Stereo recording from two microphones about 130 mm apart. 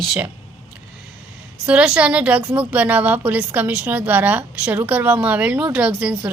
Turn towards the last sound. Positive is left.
turn(degrees=-10)  # may be behind; listen again after turning